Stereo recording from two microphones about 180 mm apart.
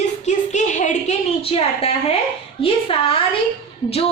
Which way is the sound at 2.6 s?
30° left (ahead or behind).